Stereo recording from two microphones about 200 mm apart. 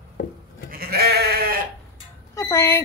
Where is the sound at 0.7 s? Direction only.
50° right (ahead or behind).